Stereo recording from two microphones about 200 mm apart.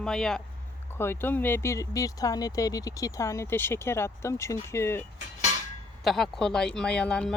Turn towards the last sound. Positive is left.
turn(degrees=5)  # may be behind; listen again after turning